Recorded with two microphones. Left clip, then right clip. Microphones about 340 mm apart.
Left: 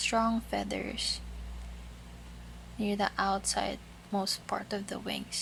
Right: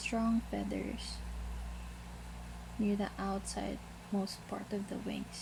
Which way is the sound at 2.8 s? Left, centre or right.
Left.